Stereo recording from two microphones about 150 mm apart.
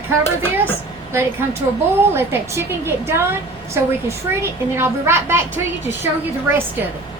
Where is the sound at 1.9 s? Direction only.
15° right (ahead or behind).